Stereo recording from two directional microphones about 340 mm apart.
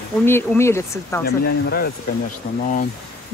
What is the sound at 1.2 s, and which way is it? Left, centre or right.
Speech, left.